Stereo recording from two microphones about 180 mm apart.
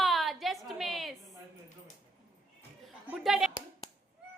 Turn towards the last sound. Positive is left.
turn(degrees=0)  # may be behind; listen again after turning